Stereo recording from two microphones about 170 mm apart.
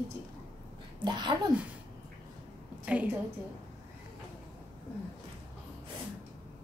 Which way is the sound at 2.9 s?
10° right (ahead or behind).